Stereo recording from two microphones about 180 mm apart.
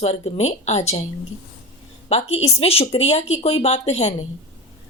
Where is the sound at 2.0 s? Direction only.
35° left (ahead or behind).